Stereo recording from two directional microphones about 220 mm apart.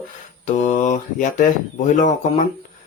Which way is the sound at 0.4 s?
35° left (ahead or behind).